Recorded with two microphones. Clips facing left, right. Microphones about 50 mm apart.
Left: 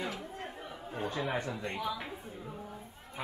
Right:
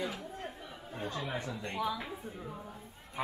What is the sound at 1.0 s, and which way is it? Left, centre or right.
Speech, left.